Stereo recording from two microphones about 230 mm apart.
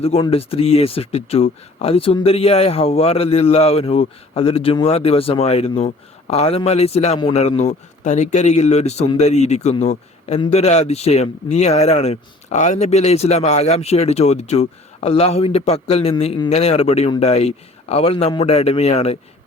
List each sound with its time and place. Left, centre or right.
0.0 s a man's voice: left